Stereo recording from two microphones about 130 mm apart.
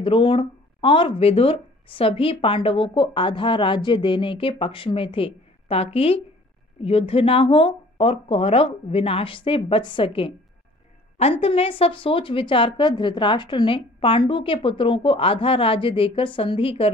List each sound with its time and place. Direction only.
0.0 s speech: 40° left (ahead or behind)